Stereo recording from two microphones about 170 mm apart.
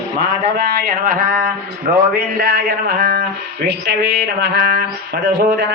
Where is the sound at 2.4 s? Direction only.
65° right (ahead or behind).